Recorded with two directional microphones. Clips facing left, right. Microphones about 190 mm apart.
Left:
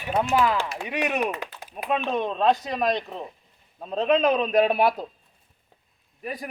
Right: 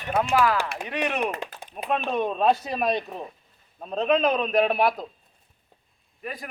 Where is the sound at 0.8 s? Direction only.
10° left (ahead or behind).